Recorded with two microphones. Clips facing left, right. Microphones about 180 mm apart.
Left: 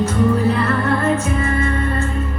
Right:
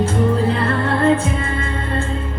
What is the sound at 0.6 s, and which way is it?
Music, 30° right (ahead or behind).